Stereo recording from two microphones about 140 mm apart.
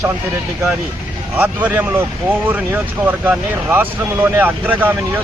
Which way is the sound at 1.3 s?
10° right (ahead or behind).